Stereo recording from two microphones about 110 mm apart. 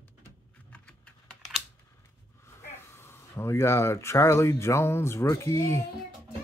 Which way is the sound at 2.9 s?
20° left (ahead or behind).